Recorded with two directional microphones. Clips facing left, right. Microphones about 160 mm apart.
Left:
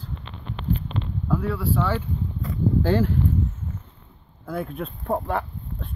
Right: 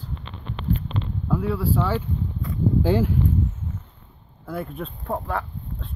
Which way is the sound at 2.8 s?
10° right (ahead or behind).